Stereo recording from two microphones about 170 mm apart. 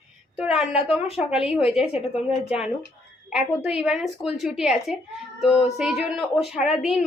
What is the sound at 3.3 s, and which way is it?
A woman's voice, 5° right (ahead or behind).